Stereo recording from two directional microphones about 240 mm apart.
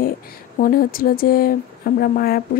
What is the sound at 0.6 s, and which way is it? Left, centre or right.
Speech, left.